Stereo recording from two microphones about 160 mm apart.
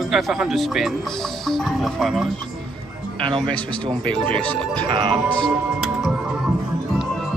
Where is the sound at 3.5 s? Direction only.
5° left (ahead or behind).